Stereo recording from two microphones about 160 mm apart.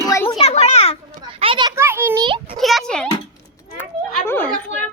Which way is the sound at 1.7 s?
15° right (ahead or behind).